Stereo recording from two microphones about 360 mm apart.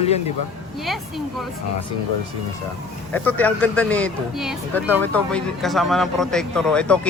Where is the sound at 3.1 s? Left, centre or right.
Centre.